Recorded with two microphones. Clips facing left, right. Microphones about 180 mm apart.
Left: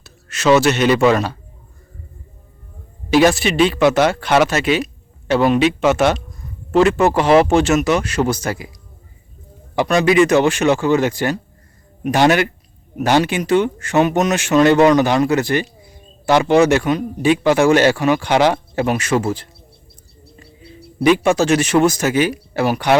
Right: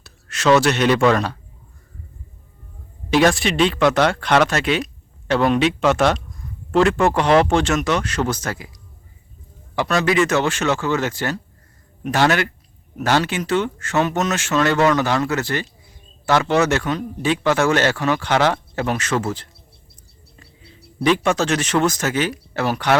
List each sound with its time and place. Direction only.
0.0 s speech: centre (ahead or behind)
3.1 s a man's voice: 5° left (ahead or behind)
9.7 s a man's voice: 15° left (ahead or behind)
21.0 s a man's voice: 10° left (ahead or behind)